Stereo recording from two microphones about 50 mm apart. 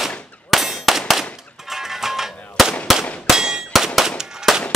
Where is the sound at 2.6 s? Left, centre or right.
Centre.